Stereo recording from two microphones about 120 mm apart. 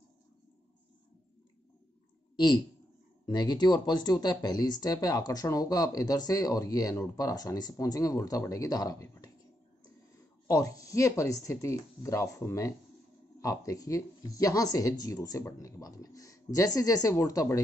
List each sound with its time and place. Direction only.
2.3 s speech: 35° left (ahead or behind)
10.5 s speech: 30° left (ahead or behind)